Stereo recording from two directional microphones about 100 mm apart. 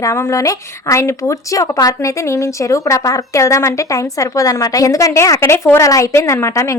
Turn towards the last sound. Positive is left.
turn(degrees=30)  # may be behind; listen again after turning